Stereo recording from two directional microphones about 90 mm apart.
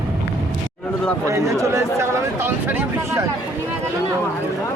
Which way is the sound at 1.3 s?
35° right (ahead or behind).